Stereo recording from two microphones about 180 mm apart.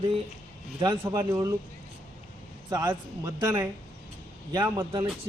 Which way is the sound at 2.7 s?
20° right (ahead or behind).